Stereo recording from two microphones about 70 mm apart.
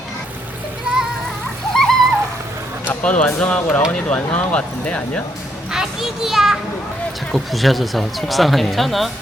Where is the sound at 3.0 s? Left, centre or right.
Centre.